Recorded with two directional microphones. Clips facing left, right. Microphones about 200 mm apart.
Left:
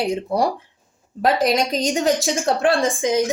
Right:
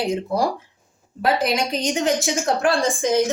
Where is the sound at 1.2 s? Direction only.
40° left (ahead or behind).